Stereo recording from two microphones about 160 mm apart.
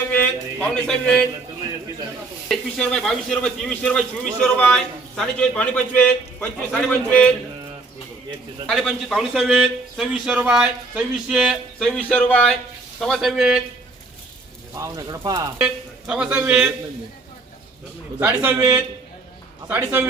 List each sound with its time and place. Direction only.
0.1 s speech: 10° left (ahead or behind)
2.5 s a man's voice: 5° left (ahead or behind)
8.6 s a man's voice: centre (ahead or behind)
14.8 s speech: 20° right (ahead or behind)
15.5 s speech: 5° right (ahead or behind)
18.2 s speech: 10° right (ahead or behind)